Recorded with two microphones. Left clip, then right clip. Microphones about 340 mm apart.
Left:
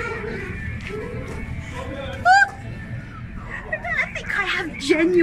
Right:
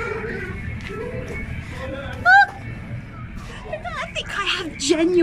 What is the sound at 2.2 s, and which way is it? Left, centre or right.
Honk, centre.